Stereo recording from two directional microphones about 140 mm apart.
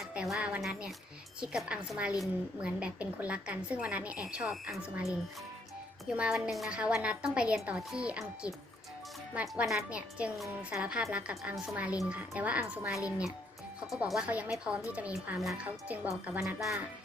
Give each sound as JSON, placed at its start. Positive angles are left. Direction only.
{"t": 0.1, "sound": "a woman's voice", "side_deg": -5}
{"t": 6.1, "sound": "a woman's voice", "side_deg": -5}
{"t": 9.3, "sound": "a woman's voice", "side_deg": -10}